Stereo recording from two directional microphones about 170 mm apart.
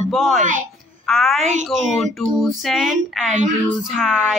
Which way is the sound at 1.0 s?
Centre (ahead or behind).